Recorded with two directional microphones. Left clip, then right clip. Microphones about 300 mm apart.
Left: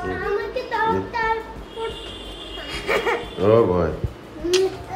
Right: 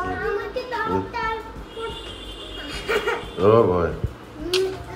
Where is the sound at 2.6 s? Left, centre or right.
Centre.